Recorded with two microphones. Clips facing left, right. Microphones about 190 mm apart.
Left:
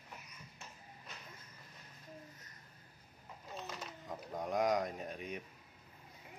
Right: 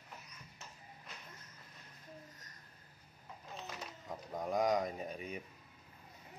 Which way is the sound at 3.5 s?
Centre (ahead or behind).